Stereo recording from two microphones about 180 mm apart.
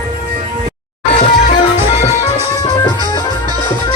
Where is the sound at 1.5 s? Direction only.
35° left (ahead or behind).